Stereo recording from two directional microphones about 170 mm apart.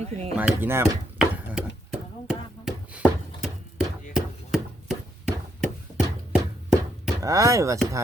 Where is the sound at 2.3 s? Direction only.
5° right (ahead or behind).